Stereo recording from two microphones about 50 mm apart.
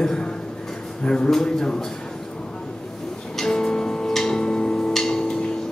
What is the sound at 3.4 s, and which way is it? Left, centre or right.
Music, centre.